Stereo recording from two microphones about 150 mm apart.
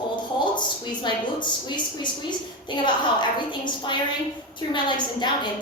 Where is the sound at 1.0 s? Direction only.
30° left (ahead or behind).